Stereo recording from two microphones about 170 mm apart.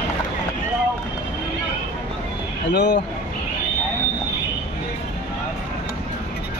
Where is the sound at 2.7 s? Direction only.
90° left.